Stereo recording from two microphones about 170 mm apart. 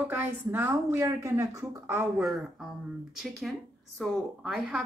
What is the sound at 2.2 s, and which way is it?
Speech, centre (ahead or behind).